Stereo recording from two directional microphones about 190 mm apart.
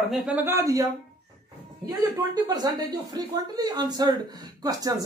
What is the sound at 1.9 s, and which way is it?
Speech, 20° right (ahead or behind).